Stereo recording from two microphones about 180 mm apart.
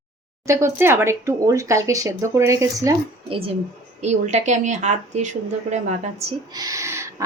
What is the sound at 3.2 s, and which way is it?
Speech, 30° right (ahead or behind).